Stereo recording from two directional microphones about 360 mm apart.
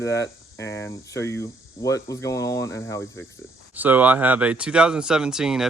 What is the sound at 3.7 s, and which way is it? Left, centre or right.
Speech, centre.